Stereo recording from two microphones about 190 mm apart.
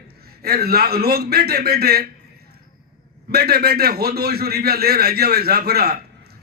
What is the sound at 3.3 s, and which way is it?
A man's voice, 55° right (ahead or behind).